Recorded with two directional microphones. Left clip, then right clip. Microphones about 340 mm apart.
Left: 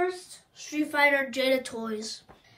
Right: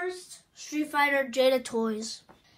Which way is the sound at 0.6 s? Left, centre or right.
Centre.